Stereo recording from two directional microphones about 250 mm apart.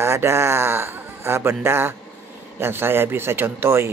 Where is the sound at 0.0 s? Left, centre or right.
Centre.